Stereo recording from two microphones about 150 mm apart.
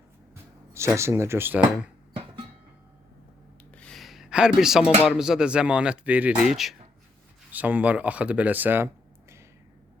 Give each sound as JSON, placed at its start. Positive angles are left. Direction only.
{"t": 0.7, "sound": "speech", "side_deg": -20}
{"t": 2.1, "sound": "music", "side_deg": -35}
{"t": 3.8, "sound": "speech", "side_deg": 5}